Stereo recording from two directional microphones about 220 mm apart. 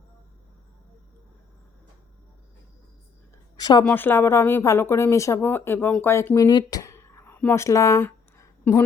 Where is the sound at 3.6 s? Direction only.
20° left (ahead or behind).